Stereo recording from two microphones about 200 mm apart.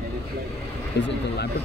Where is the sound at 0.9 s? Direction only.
60° left (ahead or behind).